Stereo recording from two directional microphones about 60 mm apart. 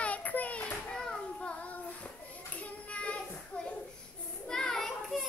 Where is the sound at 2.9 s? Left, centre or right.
Left.